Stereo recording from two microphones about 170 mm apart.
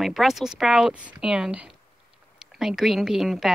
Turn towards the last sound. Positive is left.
turn(degrees=0)  # may be behind; listen again after turning